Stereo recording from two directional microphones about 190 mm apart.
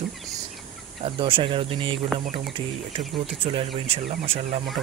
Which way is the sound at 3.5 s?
30° right (ahead or behind).